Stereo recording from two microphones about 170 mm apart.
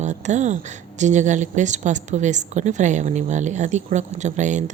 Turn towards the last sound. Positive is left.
turn(degrees=-45)  # may be behind; listen again after turning